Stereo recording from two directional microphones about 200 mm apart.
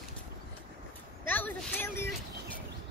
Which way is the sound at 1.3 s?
10° left (ahead or behind).